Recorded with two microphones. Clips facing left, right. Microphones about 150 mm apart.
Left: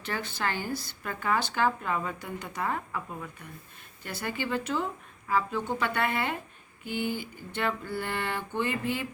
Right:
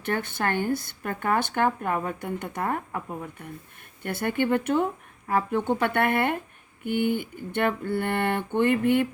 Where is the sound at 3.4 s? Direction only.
55° right (ahead or behind).